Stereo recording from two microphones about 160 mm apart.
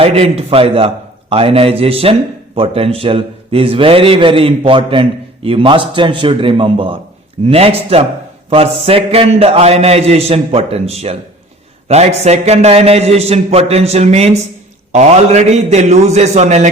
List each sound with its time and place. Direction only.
0.0 s a man's voice: 40° right (ahead or behind)